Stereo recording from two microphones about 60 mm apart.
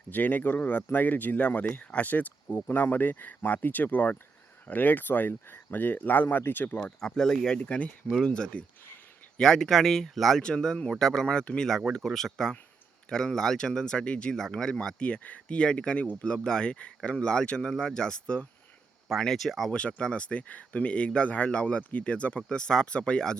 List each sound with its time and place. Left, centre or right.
0.1 s speech: left
7.0 s speech: centre
7.6 s speech: left
19.0 s speech: centre
19.7 s speech: centre